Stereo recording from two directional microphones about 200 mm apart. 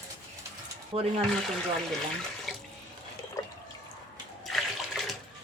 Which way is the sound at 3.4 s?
15° left (ahead or behind).